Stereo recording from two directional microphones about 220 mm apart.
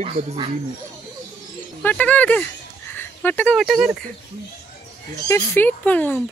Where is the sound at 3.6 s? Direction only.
5° right (ahead or behind).